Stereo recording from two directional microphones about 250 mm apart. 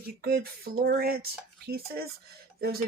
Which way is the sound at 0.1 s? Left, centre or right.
Right.